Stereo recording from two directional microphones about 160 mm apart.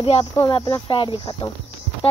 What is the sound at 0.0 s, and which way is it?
Speech, 35° left (ahead or behind).